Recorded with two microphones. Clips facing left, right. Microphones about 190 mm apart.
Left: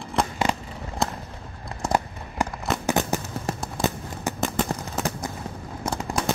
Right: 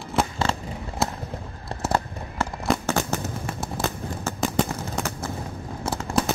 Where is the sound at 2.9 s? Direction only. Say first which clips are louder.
Left 1 dB; 15° left (ahead or behind).